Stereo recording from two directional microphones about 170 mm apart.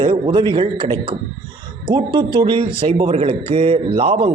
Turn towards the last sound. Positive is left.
turn(degrees=-35)  # may be behind; listen again after turning